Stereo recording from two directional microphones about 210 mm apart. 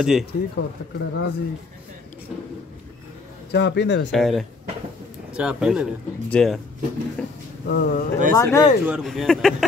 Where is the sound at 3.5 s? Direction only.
55° left (ahead or behind).